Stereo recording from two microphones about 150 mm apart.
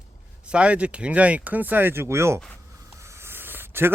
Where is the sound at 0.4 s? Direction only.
10° right (ahead or behind).